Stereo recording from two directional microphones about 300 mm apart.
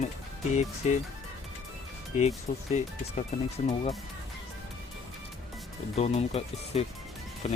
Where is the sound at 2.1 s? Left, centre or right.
Left.